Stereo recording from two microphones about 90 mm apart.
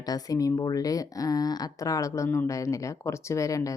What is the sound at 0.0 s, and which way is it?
Speech, 45° left (ahead or behind).